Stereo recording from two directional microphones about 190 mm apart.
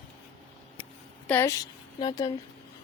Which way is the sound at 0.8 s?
10° left (ahead or behind).